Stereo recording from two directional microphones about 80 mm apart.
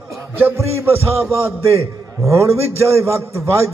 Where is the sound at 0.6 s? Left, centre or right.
Right.